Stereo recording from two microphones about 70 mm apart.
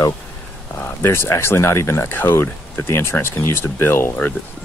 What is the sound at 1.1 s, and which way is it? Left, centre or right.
Speech, left.